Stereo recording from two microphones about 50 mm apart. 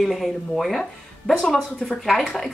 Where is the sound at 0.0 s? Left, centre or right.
Centre.